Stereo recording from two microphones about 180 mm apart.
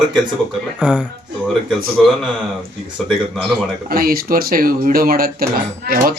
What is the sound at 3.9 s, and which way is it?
Speech, 55° right (ahead or behind).